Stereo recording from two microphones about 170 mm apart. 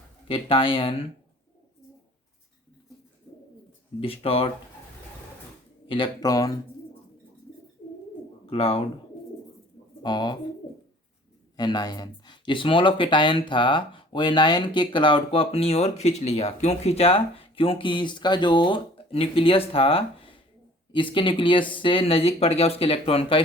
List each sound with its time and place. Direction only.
0.3 s speech: 30° left (ahead or behind)
4.0 s speech: 35° left (ahead or behind)
5.9 s speech: 25° left (ahead or behind)
8.4 s speech: 35° left (ahead or behind)
10.0 s speech: 25° left (ahead or behind)
11.5 s speech: 25° left (ahead or behind)